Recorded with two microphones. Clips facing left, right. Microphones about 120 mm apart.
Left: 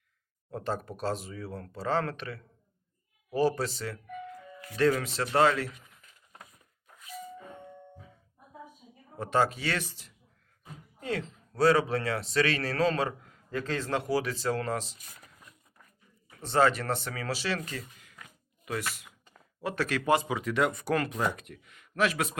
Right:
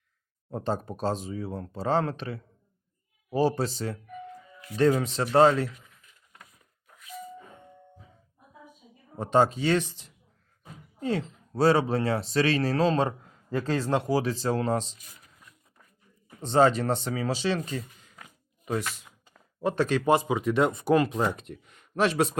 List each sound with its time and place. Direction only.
0.5 s speech: 25° right (ahead or behind)
9.1 s speech: 25° right (ahead or behind)
16.4 s speech: 25° right (ahead or behind)